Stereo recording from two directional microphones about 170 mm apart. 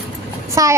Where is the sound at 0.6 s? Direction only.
20° right (ahead or behind).